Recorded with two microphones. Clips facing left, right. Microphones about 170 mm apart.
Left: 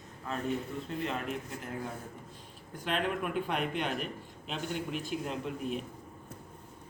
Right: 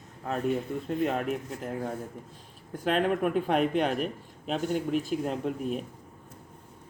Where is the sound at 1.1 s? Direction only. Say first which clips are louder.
Right 6 dB; 45° right (ahead or behind).